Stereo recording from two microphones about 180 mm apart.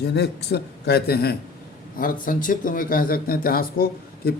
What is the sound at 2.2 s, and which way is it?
Speech, 50° left (ahead or behind).